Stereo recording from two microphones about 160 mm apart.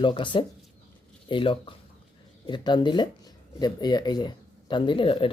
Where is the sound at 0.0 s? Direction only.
30° left (ahead or behind).